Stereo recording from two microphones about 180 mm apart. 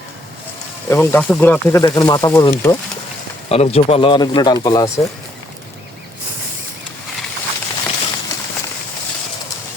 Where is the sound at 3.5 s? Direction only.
35° left (ahead or behind).